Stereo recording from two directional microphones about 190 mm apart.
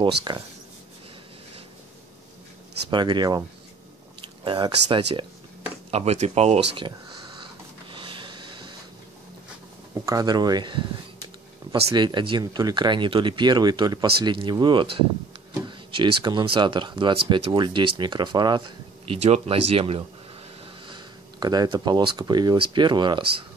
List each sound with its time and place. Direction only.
0.0 s speech: 20° right (ahead or behind)
2.9 s speech: 25° right (ahead or behind)
7.9 s a sound: 25° right (ahead or behind)
10.0 s speech: 20° right (ahead or behind)
19.0 s speech: 35° right (ahead or behind)